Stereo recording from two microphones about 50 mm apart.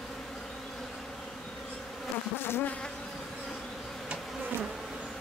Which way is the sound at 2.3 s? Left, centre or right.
Left.